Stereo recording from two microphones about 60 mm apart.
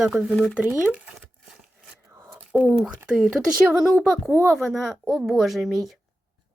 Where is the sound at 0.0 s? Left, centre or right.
Centre.